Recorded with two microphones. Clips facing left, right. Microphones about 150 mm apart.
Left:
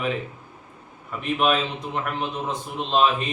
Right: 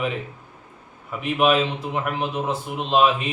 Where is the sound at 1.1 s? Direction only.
5° right (ahead or behind).